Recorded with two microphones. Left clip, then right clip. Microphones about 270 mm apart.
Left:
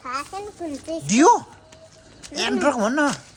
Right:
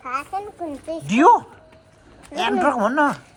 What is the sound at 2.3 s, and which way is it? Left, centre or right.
Speech, centre.